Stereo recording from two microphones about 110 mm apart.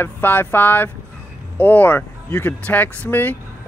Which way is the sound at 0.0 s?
20° left (ahead or behind).